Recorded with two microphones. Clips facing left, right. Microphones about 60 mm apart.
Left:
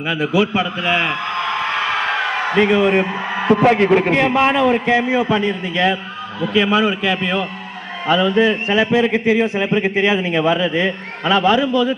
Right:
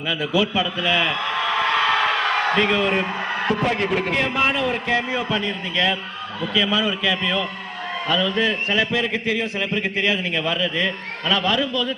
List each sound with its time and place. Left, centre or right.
0.1 s a man's voice: left
2.6 s a man's voice: left